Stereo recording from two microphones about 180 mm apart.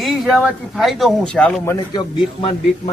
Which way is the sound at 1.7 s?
25° left (ahead or behind).